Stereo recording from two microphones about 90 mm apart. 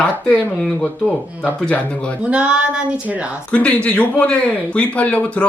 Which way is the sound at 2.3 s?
10° right (ahead or behind).